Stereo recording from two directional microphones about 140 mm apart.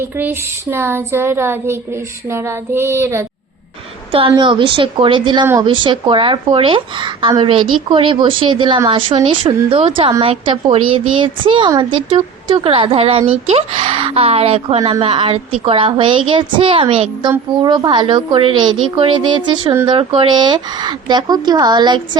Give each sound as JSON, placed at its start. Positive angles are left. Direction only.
{"t": 0.0, "sound": "a sound", "side_deg": -15}
{"t": 2.3, "sound": "child singing", "side_deg": -20}
{"t": 4.4, "sound": "a woman's voice", "side_deg": -35}
{"t": 17.6, "sound": "a woman's voice", "side_deg": -30}